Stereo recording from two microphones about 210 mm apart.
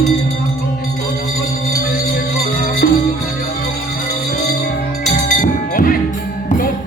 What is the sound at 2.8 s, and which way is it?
Music, 45° left (ahead or behind).